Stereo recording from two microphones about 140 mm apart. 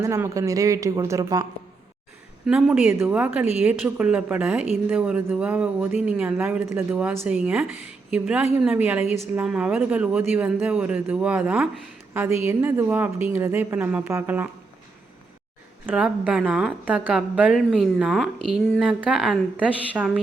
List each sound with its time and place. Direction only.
0.0 s speech: 20° right (ahead or behind)
2.5 s speech: 5° right (ahead or behind)
15.9 s speech: 10° right (ahead or behind)